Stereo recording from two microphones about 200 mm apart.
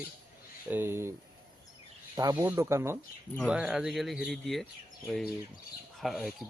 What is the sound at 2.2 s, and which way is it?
Speech, 20° right (ahead or behind).